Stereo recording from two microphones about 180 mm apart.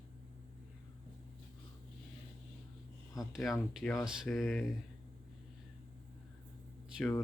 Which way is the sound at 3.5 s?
10° left (ahead or behind).